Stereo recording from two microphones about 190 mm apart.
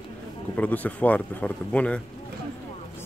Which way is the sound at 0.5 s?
10° left (ahead or behind).